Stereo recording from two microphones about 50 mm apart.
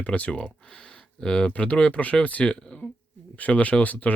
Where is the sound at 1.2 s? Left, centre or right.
Centre.